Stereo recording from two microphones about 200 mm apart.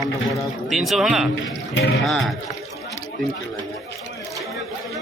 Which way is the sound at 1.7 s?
65° left (ahead or behind).